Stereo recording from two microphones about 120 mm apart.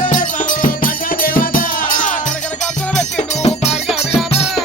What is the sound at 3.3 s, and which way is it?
Music, 65° left (ahead or behind).